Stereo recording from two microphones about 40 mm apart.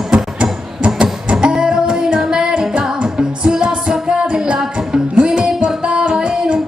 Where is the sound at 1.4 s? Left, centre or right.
Centre.